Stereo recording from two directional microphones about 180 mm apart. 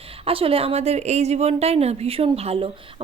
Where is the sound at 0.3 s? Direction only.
30° right (ahead or behind).